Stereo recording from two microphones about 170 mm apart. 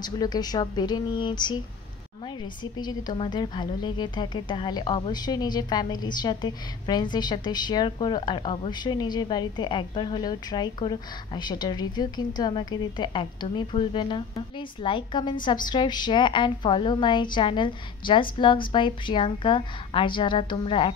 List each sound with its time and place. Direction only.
0.0 s a woman's voice: 25° left (ahead or behind)